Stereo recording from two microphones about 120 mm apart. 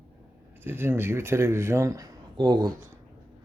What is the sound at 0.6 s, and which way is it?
Speech, 20° right (ahead or behind).